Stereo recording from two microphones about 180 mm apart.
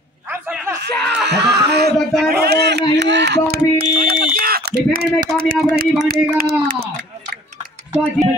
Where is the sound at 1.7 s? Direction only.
65° right (ahead or behind).